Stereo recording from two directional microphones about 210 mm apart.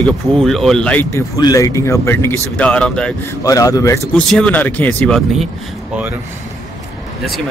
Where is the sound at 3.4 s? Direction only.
15° left (ahead or behind).